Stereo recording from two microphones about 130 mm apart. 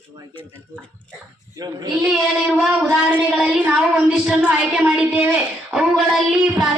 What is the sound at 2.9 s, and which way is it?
Speech, 10° right (ahead or behind).